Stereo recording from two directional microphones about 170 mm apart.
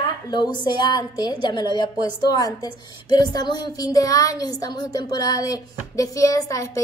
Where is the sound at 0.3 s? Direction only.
25° left (ahead or behind).